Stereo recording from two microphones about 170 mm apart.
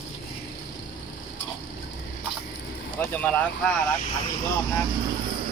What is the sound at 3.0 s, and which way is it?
Vehicle, 10° left (ahead or behind).